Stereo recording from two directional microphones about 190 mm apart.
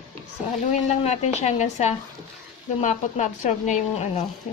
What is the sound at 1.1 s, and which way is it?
Speech, 35° left (ahead or behind).